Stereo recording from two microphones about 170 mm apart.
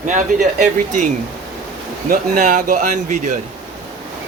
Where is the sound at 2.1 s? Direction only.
50° right (ahead or behind).